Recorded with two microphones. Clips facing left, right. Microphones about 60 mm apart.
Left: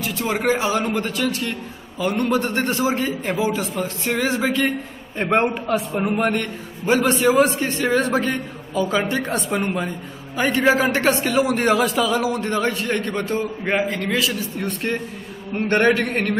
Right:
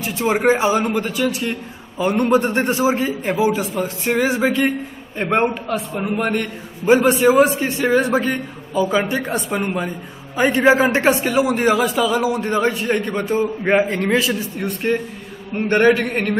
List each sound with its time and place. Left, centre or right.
0.0 s a man's voice: right
0.8 s a man's voice: centre
5.1 s a man's voice: centre
6.9 s a man's voice: centre
10.3 s a man's voice: right
11.1 s a man's voice: centre
13.8 s a man's voice: right
14.6 s a man's voice: centre